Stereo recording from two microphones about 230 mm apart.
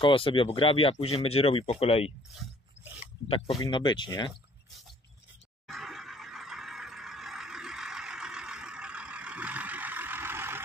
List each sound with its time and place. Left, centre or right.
0.0 s speech: left
3.3 s speech: left
5.7 s a sound: centre